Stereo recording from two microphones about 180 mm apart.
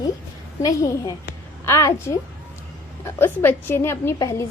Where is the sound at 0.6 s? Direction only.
20° left (ahead or behind).